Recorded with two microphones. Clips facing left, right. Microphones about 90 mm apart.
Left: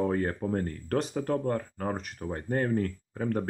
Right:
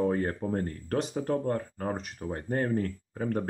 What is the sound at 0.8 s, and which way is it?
Speech, 40° left (ahead or behind).